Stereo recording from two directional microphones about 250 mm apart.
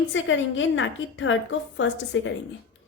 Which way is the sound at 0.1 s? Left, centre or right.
Left.